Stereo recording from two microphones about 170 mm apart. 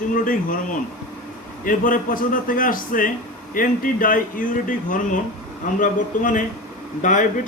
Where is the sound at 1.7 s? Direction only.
55° left (ahead or behind).